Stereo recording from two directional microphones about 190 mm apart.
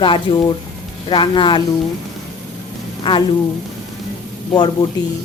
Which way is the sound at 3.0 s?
25° left (ahead or behind).